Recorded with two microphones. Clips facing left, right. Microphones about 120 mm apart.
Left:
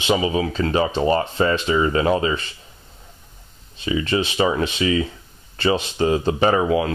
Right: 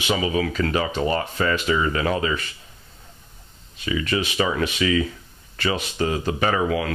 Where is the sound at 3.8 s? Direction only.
30° left (ahead or behind).